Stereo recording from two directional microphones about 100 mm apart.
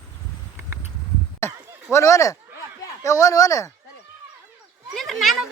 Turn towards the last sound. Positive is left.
turn(degrees=0)  # may be behind; listen again after turning